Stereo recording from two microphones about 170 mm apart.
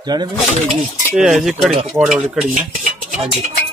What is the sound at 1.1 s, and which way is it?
A man's voice, 5° right (ahead or behind).